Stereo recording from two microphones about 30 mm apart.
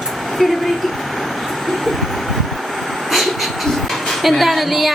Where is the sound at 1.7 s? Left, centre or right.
Centre.